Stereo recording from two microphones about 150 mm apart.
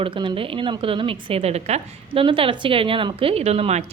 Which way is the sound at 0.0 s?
35° right (ahead or behind).